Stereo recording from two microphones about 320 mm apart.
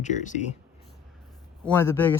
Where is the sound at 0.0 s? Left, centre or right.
Left.